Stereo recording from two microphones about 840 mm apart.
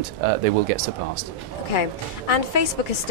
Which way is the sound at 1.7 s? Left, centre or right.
Left.